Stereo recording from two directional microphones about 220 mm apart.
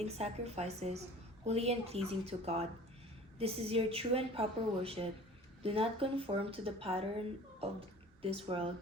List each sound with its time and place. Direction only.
0.0 s a woman's voice: 30° right (ahead or behind)
8.2 s a woman's voice: 25° right (ahead or behind)